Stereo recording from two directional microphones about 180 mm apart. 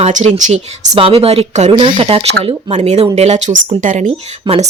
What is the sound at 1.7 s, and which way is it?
Speech, 25° right (ahead or behind).